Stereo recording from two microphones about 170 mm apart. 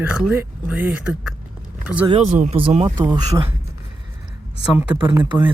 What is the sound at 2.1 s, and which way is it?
Speech, 40° right (ahead or behind).